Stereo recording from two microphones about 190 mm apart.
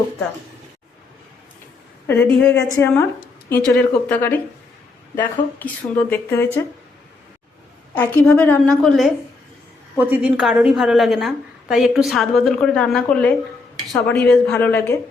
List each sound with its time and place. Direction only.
2.4 s speech: 10° left (ahead or behind)
7.9 s a woman's voice: 10° left (ahead or behind)